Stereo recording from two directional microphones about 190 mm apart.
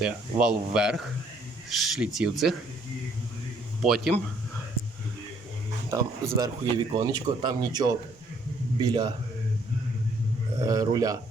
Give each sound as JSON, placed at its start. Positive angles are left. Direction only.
{"t": 0.0, "sound": "speech", "side_deg": -5}
{"t": 3.8, "sound": "speech", "side_deg": 0}
{"t": 5.9, "sound": "speech", "side_deg": -20}
{"t": 10.6, "sound": "speech", "side_deg": -20}